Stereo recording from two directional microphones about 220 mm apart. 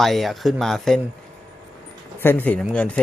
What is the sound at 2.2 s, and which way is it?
Speech, 10° left (ahead or behind).